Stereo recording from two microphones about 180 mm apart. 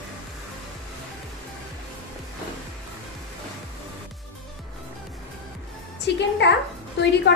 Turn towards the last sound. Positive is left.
turn(degrees=70)  # may be behind; listen again after turning